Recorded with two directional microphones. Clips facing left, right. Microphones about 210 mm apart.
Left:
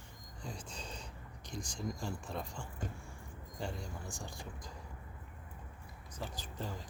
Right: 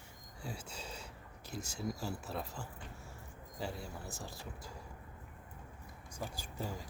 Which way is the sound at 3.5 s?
5° right (ahead or behind).